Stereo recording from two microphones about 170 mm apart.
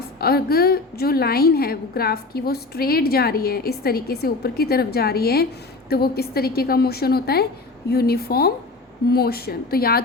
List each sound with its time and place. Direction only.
0.2 s a woman's voice: 65° left (ahead or behind)